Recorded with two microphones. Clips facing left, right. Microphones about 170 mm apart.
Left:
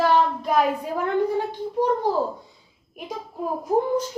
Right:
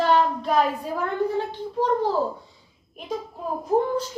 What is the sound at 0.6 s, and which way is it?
A child's voice, 15° left (ahead or behind).